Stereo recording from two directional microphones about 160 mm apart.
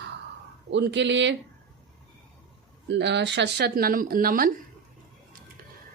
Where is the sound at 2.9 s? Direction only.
90° right; by 4.5 s 65° right (ahead or behind).